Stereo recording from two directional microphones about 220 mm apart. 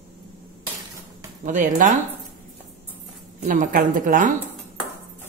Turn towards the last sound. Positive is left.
turn(degrees=-40)  # may be behind; listen again after turning